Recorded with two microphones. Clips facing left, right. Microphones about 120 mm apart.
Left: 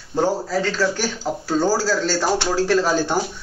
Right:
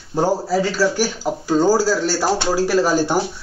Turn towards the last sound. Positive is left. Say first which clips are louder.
# right 2 dB
turn(degrees=-10)  # may be behind; listen again after turning